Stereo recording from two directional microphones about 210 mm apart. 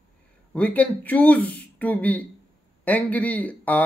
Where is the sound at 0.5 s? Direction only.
5° left (ahead or behind).